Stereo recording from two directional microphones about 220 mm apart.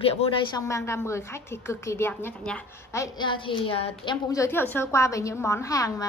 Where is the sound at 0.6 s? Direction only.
10° left (ahead or behind).